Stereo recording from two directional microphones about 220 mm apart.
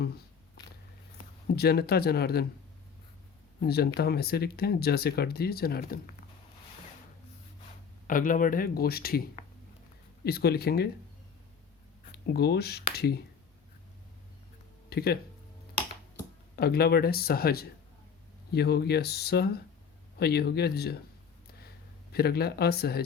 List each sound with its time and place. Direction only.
1.2 s speech: 45° left (ahead or behind)
3.6 s speech: 45° left (ahead or behind)
8.0 s speech: 40° left (ahead or behind)
10.2 s speech: 45° left (ahead or behind)
12.1 s speech: 45° left (ahead or behind)
14.8 s speech: 45° left (ahead or behind)
16.6 s speech: 45° left (ahead or behind)
22.1 s speech: 45° left (ahead or behind)